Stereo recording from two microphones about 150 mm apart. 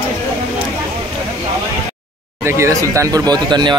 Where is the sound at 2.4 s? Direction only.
20° right (ahead or behind).